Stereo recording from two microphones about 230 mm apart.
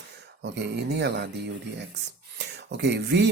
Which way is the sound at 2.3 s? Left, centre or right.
Right.